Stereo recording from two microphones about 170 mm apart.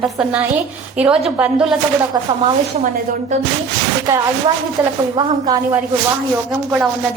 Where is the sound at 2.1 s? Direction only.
25° right (ahead or behind).